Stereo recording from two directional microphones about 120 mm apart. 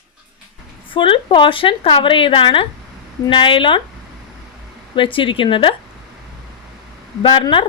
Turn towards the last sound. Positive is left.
turn(degrees=40)  # may be behind; listen again after turning